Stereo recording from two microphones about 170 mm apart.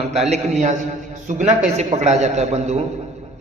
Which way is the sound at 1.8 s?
40° right (ahead or behind).